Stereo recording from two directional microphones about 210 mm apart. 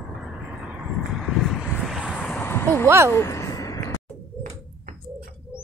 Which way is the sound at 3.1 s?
15° left (ahead or behind).